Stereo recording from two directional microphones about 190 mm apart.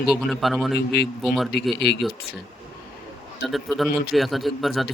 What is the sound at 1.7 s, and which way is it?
Speech, 60° left (ahead or behind).